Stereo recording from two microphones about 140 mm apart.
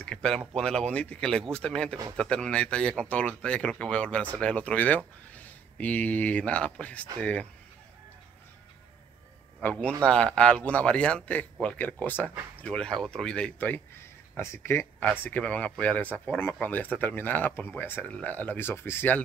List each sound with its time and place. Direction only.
0.0 s a sound: 5° left (ahead or behind)
0.6 s speech: 5° left (ahead or behind)
9.6 s a man's voice: 10° left (ahead or behind)